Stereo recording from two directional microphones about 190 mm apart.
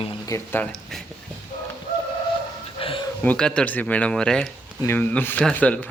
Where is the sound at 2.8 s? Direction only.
30° left (ahead or behind).